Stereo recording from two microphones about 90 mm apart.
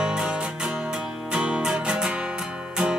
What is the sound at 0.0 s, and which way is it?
Music, 10° right (ahead or behind).